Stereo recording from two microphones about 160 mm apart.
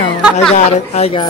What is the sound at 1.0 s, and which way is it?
Speech, 40° left (ahead or behind).